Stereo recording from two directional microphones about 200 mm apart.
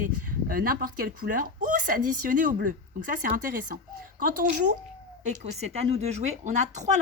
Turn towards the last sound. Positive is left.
turn(degrees=-35)  # may be behind; listen again after turning